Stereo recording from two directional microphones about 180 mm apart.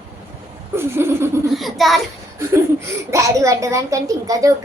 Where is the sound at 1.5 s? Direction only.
Centre (ahead or behind).